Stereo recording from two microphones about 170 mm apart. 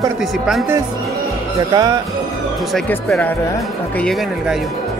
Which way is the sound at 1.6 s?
25° right (ahead or behind).